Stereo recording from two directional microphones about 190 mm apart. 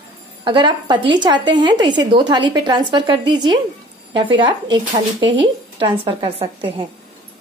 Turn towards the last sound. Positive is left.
turn(degrees=-25)  # may be behind; listen again after turning